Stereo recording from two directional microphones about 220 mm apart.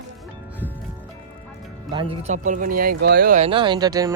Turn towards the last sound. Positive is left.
turn(degrees=-15)  # may be behind; listen again after turning